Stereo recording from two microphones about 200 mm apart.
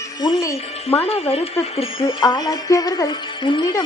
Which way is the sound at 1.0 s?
30° left (ahead or behind).